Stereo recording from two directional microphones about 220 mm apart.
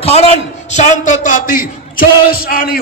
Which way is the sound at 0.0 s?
25° left (ahead or behind).